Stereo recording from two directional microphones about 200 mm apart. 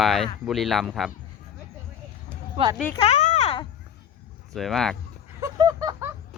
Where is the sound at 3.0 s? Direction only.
35° left (ahead or behind).